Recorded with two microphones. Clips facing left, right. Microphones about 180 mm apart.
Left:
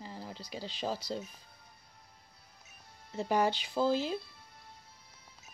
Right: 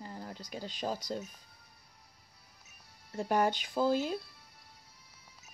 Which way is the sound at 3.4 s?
50° right (ahead or behind).